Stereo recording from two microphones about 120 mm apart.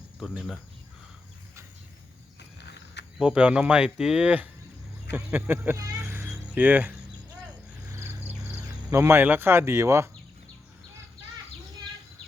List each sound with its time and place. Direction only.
0.2 s speech: 5° right (ahead or behind)
3.2 s speech: 5° right (ahead or behind)
6.0 s a sound: 20° right (ahead or behind)
7.9 s music: 25° right (ahead or behind)
8.5 s speech: 20° right (ahead or behind)